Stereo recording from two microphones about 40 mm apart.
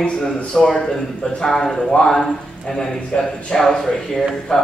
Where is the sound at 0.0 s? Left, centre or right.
Centre.